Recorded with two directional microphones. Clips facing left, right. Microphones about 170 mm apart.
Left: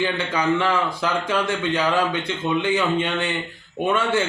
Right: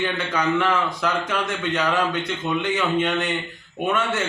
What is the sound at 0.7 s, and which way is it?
Speech, 30° left (ahead or behind).